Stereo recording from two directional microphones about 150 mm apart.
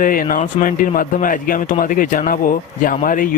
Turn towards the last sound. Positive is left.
turn(degrees=65)  # may be behind; listen again after turning